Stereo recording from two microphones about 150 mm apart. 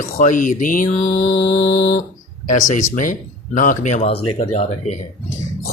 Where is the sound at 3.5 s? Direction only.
60° left (ahead or behind).